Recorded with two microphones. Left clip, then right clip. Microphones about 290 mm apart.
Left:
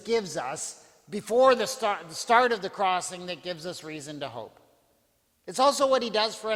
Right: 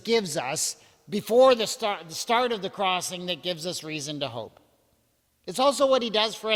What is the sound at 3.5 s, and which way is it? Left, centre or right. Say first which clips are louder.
Speech: right 4 dB; right.